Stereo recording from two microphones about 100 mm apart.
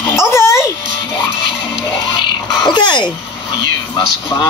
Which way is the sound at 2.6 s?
50° left (ahead or behind).